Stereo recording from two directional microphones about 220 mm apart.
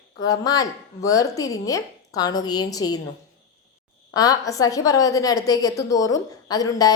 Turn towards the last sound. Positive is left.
turn(degrees=15)  # may be behind; listen again after turning